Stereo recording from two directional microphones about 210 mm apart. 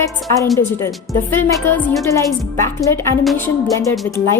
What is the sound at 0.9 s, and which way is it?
A woman's voice, 5° left (ahead or behind).